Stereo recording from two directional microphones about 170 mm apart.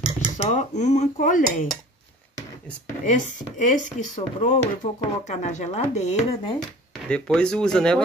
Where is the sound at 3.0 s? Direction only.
45° left (ahead or behind).